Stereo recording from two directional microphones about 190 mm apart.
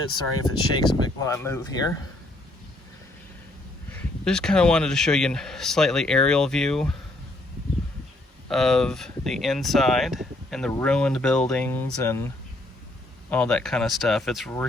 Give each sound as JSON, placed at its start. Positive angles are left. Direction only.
{"t": 0.4, "sound": "speech", "side_deg": 20}
{"t": 3.9, "sound": "speech", "side_deg": 5}
{"t": 8.4, "sound": "speech", "side_deg": 0}
{"t": 13.3, "sound": "speech", "side_deg": 5}